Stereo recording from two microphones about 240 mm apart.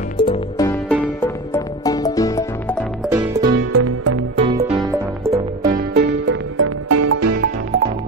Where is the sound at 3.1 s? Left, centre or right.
Centre.